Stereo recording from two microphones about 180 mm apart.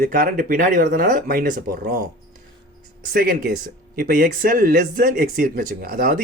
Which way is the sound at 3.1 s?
60° right (ahead or behind).